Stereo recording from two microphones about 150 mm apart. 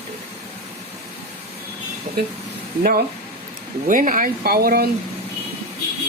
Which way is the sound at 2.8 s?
70° right (ahead or behind).